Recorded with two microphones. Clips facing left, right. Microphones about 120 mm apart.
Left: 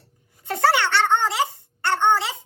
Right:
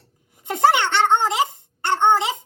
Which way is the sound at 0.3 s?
20° right (ahead or behind).